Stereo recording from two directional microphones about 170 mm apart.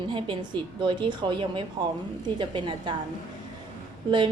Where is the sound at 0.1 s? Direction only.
30° right (ahead or behind).